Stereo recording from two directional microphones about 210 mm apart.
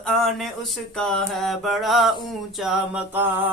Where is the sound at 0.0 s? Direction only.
Centre (ahead or behind).